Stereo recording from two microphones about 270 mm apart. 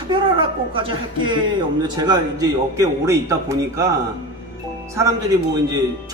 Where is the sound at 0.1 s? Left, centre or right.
Centre.